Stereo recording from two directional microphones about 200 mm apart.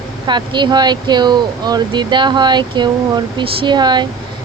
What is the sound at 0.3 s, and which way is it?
Speech, 20° right (ahead or behind).